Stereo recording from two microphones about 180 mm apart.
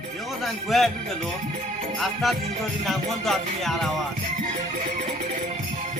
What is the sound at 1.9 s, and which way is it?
A man's voice, centre (ahead or behind).